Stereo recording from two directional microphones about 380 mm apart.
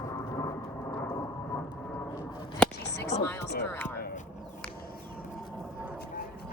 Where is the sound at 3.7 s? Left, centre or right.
Centre.